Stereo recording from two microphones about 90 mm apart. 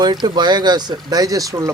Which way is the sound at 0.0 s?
55° right (ahead or behind).